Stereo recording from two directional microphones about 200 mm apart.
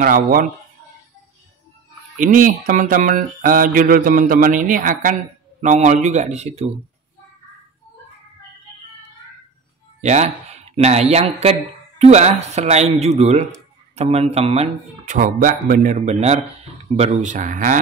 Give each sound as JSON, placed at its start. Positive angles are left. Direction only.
{"t": 0.0, "sound": "speech", "side_deg": -45}
{"t": 2.1, "sound": "speech", "side_deg": -40}
{"t": 10.0, "sound": "speech", "side_deg": -35}